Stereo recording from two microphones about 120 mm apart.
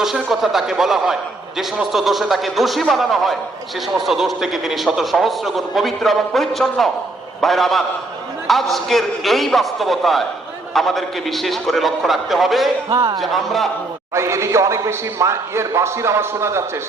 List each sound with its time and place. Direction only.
0.0 s a man's voice: 5° right (ahead or behind)
12.9 s speech: 30° right (ahead or behind)
13.1 s a man's voice: centre (ahead or behind)
14.1 s a man's voice: 25° right (ahead or behind)